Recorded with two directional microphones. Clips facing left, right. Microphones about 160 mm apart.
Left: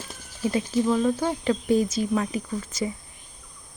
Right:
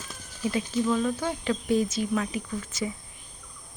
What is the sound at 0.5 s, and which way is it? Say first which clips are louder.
Speech: left 3 dB; 35° left (ahead or behind).